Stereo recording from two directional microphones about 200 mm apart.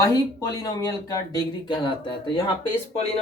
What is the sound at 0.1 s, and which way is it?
Speech, 20° left (ahead or behind).